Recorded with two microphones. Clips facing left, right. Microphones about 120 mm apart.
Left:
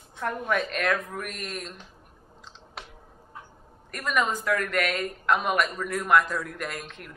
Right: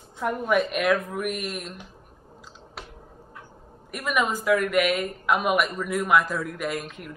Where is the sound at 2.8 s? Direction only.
Centre (ahead or behind).